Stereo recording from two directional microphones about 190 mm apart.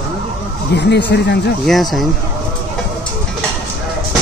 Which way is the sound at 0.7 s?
65° left (ahead or behind).